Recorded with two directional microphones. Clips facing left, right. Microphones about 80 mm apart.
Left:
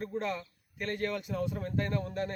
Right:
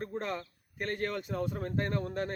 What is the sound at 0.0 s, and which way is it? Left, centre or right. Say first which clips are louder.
A man's voice: left 1 dB; right.